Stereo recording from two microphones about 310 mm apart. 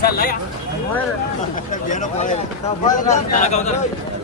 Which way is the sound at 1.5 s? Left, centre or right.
Left.